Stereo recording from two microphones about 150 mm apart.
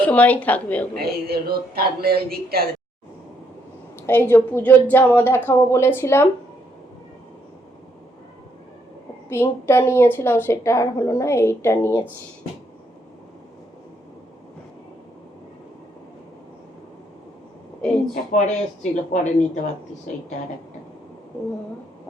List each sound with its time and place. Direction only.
0.0 s a woman's voice: 10° left (ahead or behind)
0.9 s speech: 90° right
4.0 s a woman's voice: 15° left (ahead or behind)
9.3 s a woman's voice: 15° left (ahead or behind)
18.1 s speech: 55° left (ahead or behind)